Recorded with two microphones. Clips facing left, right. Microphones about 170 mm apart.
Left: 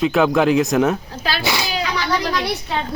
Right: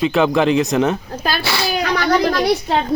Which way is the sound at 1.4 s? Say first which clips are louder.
Right 1 dB; 15° left (ahead or behind).